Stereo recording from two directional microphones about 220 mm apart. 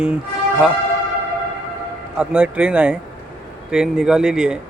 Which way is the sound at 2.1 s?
5° right (ahead or behind).